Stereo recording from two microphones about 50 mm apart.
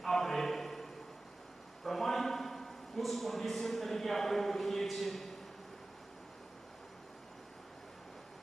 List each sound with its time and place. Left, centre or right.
0.0 s music: centre
1.9 s a man's voice: centre